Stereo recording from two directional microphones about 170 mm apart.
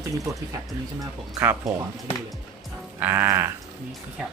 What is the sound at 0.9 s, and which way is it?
Speech, 15° right (ahead or behind).